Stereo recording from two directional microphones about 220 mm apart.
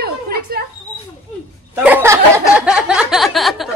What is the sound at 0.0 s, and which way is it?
Mouse, 45° right (ahead or behind).